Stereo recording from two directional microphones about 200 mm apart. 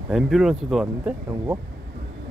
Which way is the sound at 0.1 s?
Centre (ahead or behind).